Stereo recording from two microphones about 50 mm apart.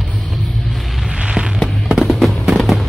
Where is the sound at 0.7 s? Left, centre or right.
Centre.